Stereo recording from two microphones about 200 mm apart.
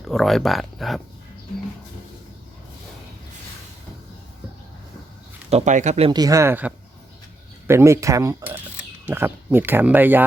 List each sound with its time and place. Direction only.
0.0 s speech: centre (ahead or behind)
5.5 s speech: 35° right (ahead or behind)
6.1 s speech: 20° right (ahead or behind)